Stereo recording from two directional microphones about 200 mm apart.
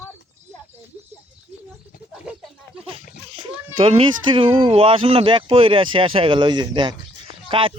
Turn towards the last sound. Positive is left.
turn(degrees=-25)  # may be behind; listen again after turning